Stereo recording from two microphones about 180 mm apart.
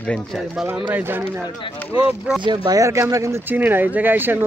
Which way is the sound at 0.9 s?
10° right (ahead or behind).